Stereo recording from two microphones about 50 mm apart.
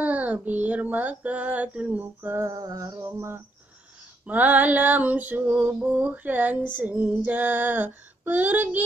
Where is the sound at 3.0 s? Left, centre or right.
Right.